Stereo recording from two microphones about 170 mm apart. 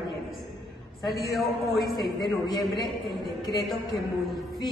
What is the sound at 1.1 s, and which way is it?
Speech, centre (ahead or behind).